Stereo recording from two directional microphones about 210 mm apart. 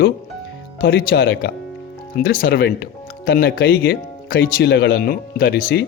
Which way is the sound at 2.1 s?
40° left (ahead or behind).